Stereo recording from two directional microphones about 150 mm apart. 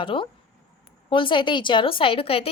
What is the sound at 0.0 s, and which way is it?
A woman's voice, 35° left (ahead or behind).